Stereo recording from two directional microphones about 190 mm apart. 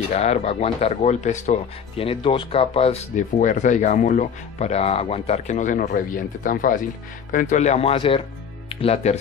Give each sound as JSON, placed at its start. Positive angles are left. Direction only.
{"t": 0.1, "sound": "speech", "side_deg": 35}